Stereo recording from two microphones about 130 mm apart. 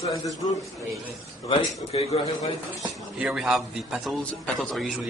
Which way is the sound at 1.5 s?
45° left (ahead or behind).